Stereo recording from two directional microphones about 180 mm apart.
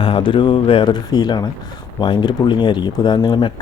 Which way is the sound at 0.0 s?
30° left (ahead or behind).